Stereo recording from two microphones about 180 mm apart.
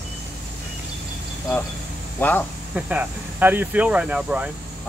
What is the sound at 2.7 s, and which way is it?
Speech, 10° right (ahead or behind).